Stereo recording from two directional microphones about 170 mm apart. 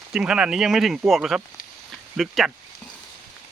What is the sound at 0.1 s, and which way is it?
Speech, 5° right (ahead or behind).